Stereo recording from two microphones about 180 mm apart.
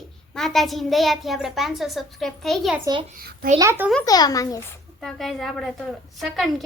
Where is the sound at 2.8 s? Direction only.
25° right (ahead or behind).